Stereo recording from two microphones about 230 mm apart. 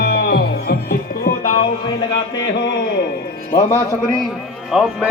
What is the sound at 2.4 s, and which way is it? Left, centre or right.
Speech, left.